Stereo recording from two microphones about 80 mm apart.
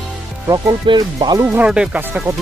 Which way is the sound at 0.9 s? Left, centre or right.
Right.